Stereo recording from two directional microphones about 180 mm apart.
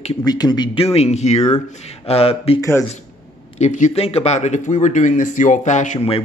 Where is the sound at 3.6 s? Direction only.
40° left (ahead or behind).